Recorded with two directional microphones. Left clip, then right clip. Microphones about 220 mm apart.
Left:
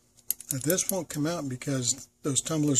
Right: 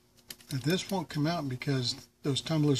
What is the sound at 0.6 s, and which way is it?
Speech, 55° left (ahead or behind).